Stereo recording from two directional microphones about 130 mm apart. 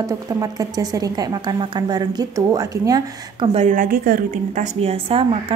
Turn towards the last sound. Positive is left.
turn(degrees=-50)  # may be behind; listen again after turning